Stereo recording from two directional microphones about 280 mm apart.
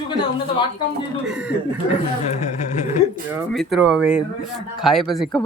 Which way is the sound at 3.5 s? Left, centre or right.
Centre.